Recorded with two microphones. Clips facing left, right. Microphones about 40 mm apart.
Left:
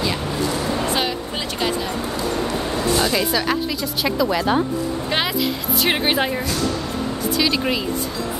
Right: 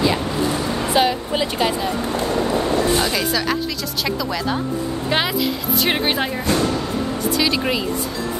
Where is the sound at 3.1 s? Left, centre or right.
Centre.